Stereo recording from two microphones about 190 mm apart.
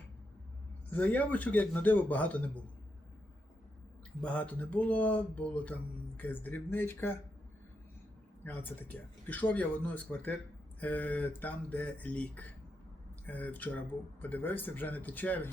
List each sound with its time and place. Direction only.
0.9 s speech: 10° left (ahead or behind)
4.2 s speech: 5° left (ahead or behind)
8.4 s speech: 10° left (ahead or behind)